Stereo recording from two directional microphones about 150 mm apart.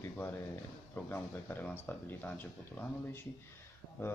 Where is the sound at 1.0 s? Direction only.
15° left (ahead or behind).